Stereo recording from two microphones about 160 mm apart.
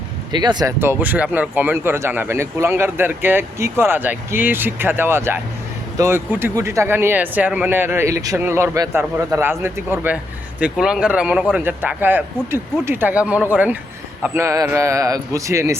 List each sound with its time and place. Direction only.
0.3 s a man's voice: 25° right (ahead or behind)
0.8 s a man's voice: 10° right (ahead or behind)